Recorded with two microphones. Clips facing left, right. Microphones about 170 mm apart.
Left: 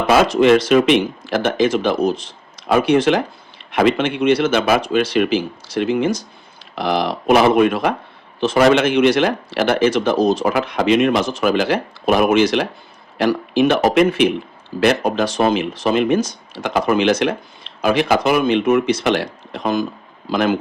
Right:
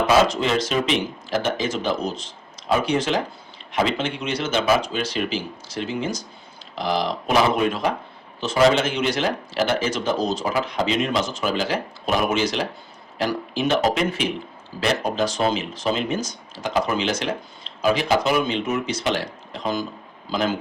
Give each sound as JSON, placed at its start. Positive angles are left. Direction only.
{"t": 0.1, "sound": "speech", "side_deg": 60}